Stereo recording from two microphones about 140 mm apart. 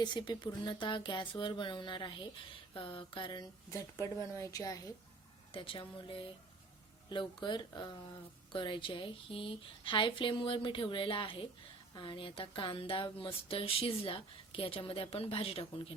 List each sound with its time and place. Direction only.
0.0 s speech: 30° left (ahead or behind)
3.7 s speech: 20° left (ahead or behind)
5.5 s speech: 40° left (ahead or behind)